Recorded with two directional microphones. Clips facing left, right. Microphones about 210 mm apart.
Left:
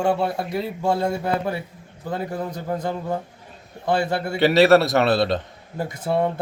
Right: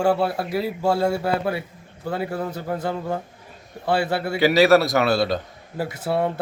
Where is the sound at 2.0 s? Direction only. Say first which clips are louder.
Right 1 dB; 10° right (ahead or behind).